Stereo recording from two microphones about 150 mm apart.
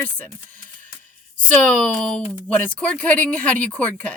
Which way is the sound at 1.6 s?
5° left (ahead or behind).